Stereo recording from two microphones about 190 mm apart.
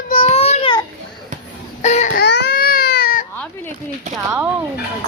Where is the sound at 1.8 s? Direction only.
35° left (ahead or behind).